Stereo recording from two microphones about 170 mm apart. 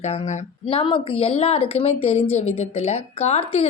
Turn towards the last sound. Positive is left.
turn(degrees=40)  # may be behind; listen again after turning